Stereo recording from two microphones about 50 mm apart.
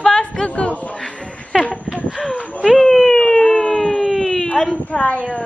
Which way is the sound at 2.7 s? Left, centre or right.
Centre.